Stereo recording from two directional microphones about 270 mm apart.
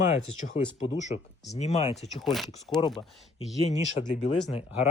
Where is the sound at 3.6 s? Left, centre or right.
Left.